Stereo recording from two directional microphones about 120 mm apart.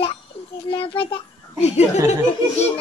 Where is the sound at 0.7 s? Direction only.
45° left (ahead or behind).